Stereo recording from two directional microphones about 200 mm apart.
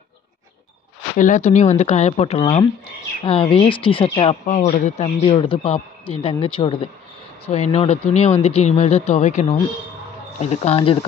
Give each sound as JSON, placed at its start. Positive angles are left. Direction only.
{"t": 1.1, "sound": "speech", "side_deg": 40}